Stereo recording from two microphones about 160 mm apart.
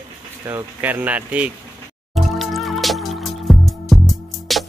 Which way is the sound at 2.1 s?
Centre (ahead or behind).